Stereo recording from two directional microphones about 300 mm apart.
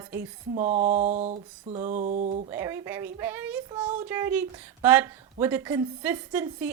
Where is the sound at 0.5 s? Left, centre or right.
Right.